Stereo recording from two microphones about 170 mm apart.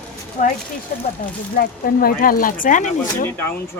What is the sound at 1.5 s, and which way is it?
Speech, 60° left (ahead or behind).